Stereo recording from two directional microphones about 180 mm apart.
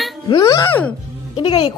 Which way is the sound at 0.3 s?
20° left (ahead or behind).